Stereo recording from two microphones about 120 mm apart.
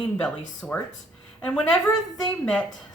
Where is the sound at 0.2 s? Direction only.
10° left (ahead or behind).